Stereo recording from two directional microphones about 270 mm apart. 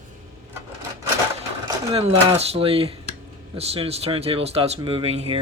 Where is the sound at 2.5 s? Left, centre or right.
Right.